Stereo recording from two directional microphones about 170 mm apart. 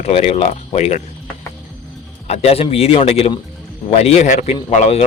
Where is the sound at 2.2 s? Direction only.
40° left (ahead or behind).